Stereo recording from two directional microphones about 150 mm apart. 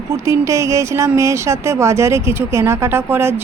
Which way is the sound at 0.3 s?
20° right (ahead or behind).